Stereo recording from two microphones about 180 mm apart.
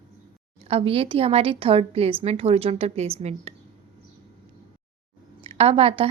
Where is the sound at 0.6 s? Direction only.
35° right (ahead or behind).